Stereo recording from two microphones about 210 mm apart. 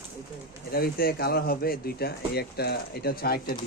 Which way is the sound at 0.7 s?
45° left (ahead or behind).